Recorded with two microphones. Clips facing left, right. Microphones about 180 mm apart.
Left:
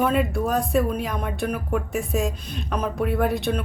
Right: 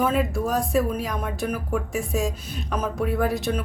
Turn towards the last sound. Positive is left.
turn(degrees=0)  # may be behind; listen again after turning